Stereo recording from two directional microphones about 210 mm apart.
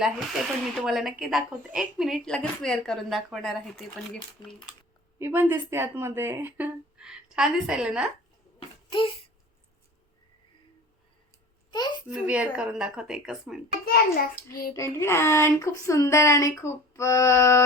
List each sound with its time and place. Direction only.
0.0 s speech: centre (ahead or behind)
5.2 s a woman's voice: 10° right (ahead or behind)
8.5 s a sound: 25° left (ahead or behind)
11.7 s a sound: 20° left (ahead or behind)
12.2 s speech: 5° right (ahead or behind)
13.8 s a child's voice: 45° left (ahead or behind)
14.8 s speech: 15° left (ahead or behind)